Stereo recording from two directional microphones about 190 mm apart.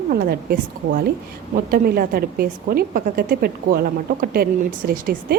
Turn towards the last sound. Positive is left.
turn(degrees=-45)  # may be behind; listen again after turning